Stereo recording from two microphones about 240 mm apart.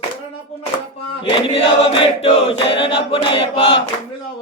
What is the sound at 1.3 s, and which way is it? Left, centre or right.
Choir, left.